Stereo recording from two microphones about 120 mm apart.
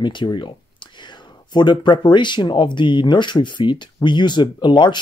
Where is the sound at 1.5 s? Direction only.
40° left (ahead or behind).